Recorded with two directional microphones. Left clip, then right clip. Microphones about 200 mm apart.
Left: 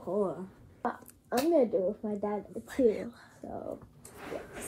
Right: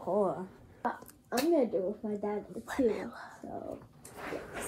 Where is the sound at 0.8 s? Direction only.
Centre (ahead or behind).